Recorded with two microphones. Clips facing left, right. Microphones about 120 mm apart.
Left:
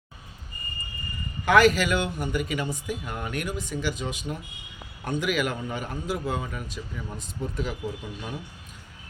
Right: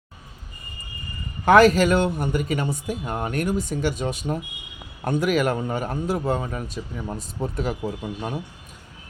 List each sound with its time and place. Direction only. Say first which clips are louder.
1.5 s a man's voice: right 5 dB; 40° right (ahead or behind)